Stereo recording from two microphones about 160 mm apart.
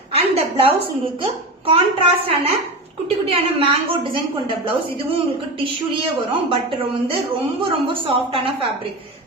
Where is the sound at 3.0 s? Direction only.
35° right (ahead or behind).